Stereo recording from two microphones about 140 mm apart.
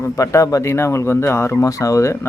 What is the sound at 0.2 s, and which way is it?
Speech, 20° left (ahead or behind).